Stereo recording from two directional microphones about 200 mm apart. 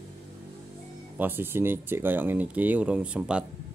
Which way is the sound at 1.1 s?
10° right (ahead or behind).